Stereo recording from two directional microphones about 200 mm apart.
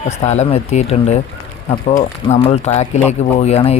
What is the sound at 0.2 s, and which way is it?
Speech, 35° left (ahead or behind).